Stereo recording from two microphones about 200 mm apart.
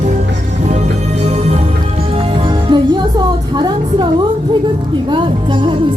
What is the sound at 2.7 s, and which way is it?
Music, 20° right (ahead or behind).